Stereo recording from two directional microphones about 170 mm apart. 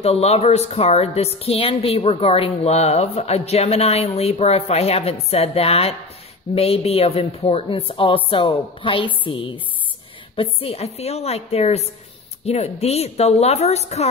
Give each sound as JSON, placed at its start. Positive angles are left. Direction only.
{"t": 0.0, "sound": "a woman's voice", "side_deg": 35}